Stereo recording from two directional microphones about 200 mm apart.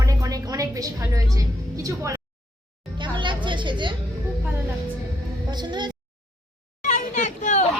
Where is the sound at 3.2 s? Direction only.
25° right (ahead or behind).